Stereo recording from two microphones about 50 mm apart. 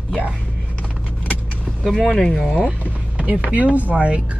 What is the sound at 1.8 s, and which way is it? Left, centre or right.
Speech, centre.